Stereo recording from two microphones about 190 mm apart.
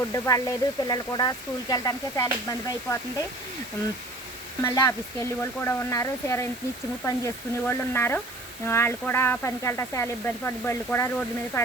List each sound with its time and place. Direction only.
0.1 s speech: 20° left (ahead or behind)
4.6 s speech: 15° left (ahead or behind)